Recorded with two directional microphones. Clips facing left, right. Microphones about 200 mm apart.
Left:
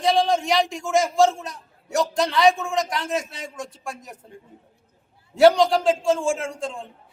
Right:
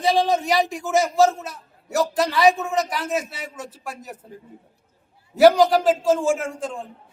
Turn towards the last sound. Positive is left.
turn(degrees=0)  # may be behind; listen again after turning